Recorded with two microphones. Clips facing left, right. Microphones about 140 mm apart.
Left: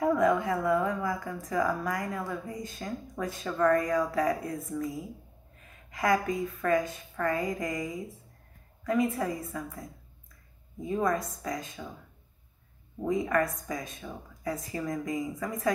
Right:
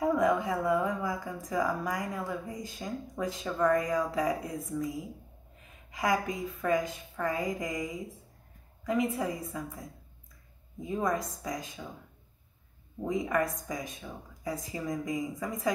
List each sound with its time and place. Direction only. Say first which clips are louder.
0.0 s speech: left 2 dB; 15° right (ahead or behind)
13.0 s speech: left 2 dB; 15° right (ahead or behind)